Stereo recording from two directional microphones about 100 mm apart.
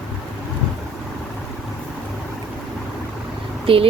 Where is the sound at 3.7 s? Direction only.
65° right (ahead or behind).